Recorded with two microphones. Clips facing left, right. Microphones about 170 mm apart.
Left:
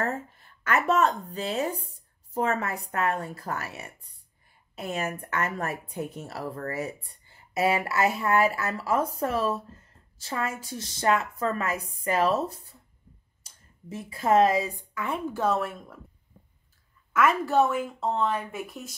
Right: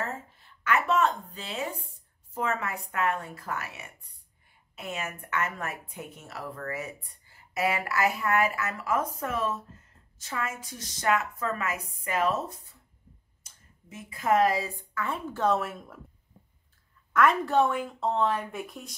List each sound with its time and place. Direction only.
0.0 s a sound: 50° left (ahead or behind)
2.3 s speech: 40° left (ahead or behind); by 15.5 s 10° left (ahead or behind)
15.5 s a woman's voice: centre (ahead or behind)
17.1 s a woman's voice: 5° left (ahead or behind)